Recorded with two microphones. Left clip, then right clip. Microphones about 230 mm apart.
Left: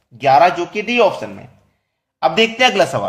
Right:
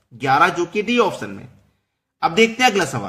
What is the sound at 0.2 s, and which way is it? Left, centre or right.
Speech, right.